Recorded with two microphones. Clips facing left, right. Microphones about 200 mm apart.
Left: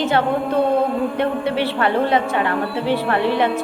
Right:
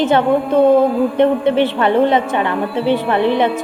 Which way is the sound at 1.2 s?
20° right (ahead or behind).